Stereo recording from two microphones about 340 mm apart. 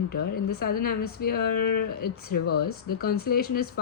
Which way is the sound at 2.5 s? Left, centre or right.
Left.